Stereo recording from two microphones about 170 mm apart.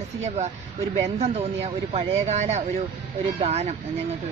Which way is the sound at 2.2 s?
40° right (ahead or behind).